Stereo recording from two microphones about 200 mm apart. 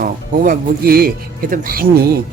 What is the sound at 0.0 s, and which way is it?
Speech, 45° right (ahead or behind).